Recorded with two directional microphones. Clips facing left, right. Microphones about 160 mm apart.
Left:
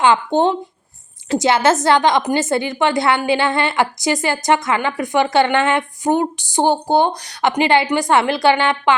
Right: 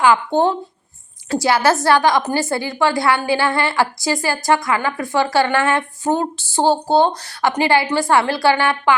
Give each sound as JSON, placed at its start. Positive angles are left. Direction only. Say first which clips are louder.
{"t": 0.0, "sound": "a woman's voice", "louder": "even", "side_deg": 20}